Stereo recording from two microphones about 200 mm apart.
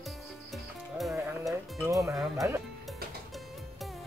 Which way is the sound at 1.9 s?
15° right (ahead or behind).